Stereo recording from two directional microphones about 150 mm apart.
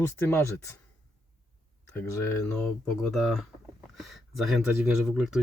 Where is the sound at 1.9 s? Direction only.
15° left (ahead or behind).